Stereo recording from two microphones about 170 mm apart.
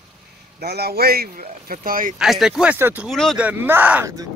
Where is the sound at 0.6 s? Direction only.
70° right (ahead or behind); by 2.2 s 55° right (ahead or behind).